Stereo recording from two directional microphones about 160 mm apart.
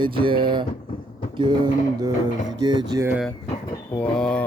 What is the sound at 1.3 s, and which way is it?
Mantra, 30° right (ahead or behind).